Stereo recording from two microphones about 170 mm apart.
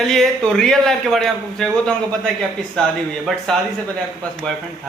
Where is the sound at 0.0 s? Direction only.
Centre (ahead or behind).